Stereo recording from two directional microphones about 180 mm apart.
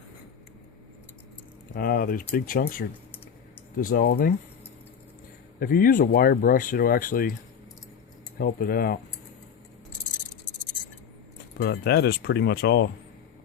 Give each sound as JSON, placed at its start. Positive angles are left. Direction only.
{"t": 1.7, "sound": "speech", "side_deg": 55}
{"t": 5.5, "sound": "speech", "side_deg": 55}
{"t": 8.4, "sound": "speech", "side_deg": 55}
{"t": 11.6, "sound": "speech", "side_deg": 65}